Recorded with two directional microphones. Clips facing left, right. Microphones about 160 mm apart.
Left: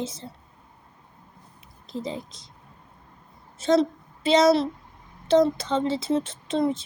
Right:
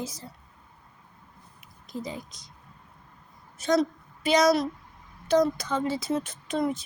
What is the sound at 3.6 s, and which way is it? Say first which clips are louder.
A woman's voice: left 3 dB; 25° left (ahead or behind).